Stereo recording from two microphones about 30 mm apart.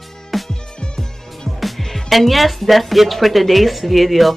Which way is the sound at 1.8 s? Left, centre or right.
Centre.